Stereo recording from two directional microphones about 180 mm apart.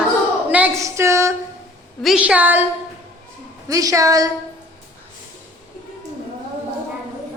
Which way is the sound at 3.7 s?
20° right (ahead or behind).